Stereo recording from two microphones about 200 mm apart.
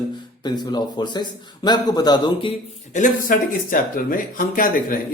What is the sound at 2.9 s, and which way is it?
Speech, 40° left (ahead or behind).